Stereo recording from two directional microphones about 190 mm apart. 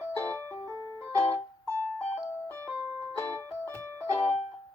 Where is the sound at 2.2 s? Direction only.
10° left (ahead or behind).